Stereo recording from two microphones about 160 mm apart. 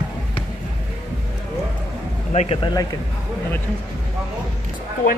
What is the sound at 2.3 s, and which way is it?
Speech, 40° left (ahead or behind).